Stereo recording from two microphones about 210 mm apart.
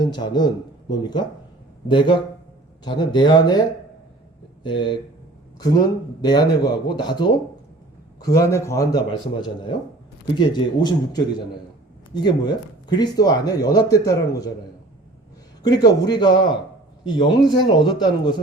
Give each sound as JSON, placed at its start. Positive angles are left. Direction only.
{"t": 0.1, "sound": "a man's voice", "side_deg": 20}
{"t": 4.6, "sound": "a man's voice", "side_deg": 20}
{"t": 6.2, "sound": "a man's voice", "side_deg": 20}
{"t": 12.2, "sound": "speech", "side_deg": 20}
{"t": 15.6, "sound": "a man's voice", "side_deg": 20}